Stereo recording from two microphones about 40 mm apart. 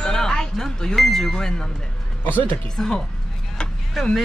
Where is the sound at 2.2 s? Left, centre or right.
Left.